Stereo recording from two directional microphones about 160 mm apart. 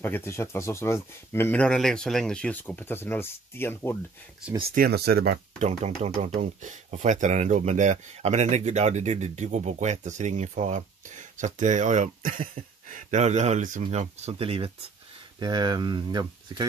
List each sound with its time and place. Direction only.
0.0 s speech: 15° left (ahead or behind)
4.7 s speech: 75° right (ahead or behind)
5.6 s speech: 45° right (ahead or behind)
12.9 s speech: 45° right (ahead or behind); by 16.6 s 25° right (ahead or behind)